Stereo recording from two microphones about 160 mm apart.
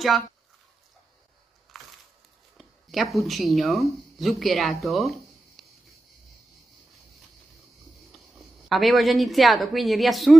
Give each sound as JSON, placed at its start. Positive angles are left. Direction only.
{"t": 1.7, "sound": "a sound", "side_deg": 0}
{"t": 2.5, "sound": "speech", "side_deg": 0}
{"t": 8.6, "sound": "speech", "side_deg": 0}